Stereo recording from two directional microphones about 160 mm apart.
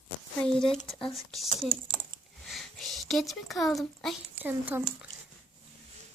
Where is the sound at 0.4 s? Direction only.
5° left (ahead or behind).